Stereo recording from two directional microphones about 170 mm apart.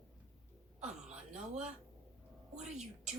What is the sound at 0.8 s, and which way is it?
Speech, 5° right (ahead or behind).